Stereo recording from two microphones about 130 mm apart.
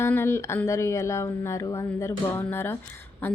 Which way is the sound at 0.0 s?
20° left (ahead or behind).